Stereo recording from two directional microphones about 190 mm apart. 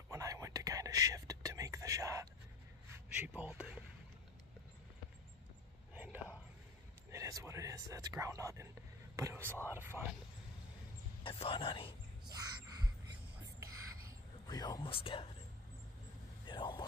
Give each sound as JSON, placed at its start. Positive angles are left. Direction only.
{"t": 0.1, "sound": "whispering", "side_deg": -15}
{"t": 3.1, "sound": "a sound", "side_deg": -5}
{"t": 5.9, "sound": "a sound", "side_deg": -5}
{"t": 7.1, "sound": "speech", "side_deg": -15}
{"t": 9.1, "sound": "whispering", "side_deg": -15}
{"t": 9.7, "sound": "speech", "side_deg": -10}
{"t": 11.2, "sound": "speech", "side_deg": 30}
{"t": 12.3, "sound": "music", "side_deg": -20}
{"t": 14.5, "sound": "speech", "side_deg": 20}
{"t": 16.4, "sound": "vehicle", "side_deg": 25}